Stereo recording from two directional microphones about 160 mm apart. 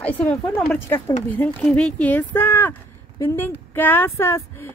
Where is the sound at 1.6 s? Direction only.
5° left (ahead or behind).